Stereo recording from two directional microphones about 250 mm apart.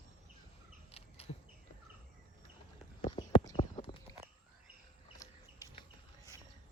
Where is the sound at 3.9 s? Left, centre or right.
Centre.